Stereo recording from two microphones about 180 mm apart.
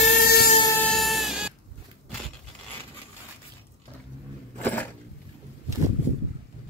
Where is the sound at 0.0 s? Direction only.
50° left (ahead or behind).